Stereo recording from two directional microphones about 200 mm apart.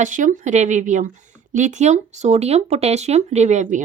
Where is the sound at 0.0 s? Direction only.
40° right (ahead or behind).